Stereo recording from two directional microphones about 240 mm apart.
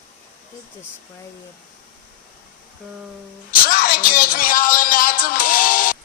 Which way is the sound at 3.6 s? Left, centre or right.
Left.